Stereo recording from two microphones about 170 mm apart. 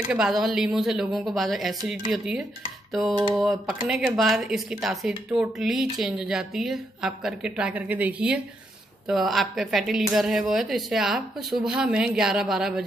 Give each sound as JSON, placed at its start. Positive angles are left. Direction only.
{"t": 0.1, "sound": "speech", "side_deg": -5}
{"t": 2.9, "sound": "a sound", "side_deg": 0}
{"t": 3.3, "sound": "speech", "side_deg": 0}